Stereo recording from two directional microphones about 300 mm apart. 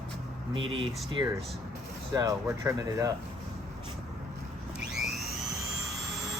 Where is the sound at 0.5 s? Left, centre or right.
Centre.